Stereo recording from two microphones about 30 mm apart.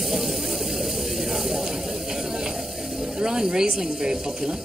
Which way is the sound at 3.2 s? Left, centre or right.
Right.